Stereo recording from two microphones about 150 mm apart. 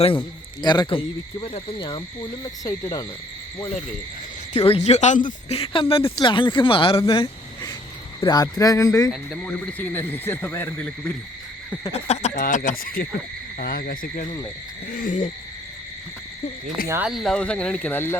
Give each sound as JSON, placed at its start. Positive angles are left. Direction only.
{"t": 0.6, "sound": "speech", "side_deg": 30}
{"t": 2.6, "sound": "speech", "side_deg": 20}
{"t": 4.5, "sound": "speech", "side_deg": 45}
{"t": 7.1, "sound": "a sound", "side_deg": 30}
{"t": 8.2, "sound": "speech", "side_deg": 25}
{"t": 9.0, "sound": "speech", "side_deg": 10}
{"t": 11.9, "sound": "speech", "side_deg": 45}
{"t": 12.3, "sound": "speech", "side_deg": 60}
{"t": 14.9, "sound": "hoot", "side_deg": 60}
{"t": 16.9, "sound": "speech", "side_deg": -5}